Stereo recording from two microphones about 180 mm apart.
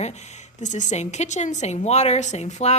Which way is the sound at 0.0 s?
40° left (ahead or behind).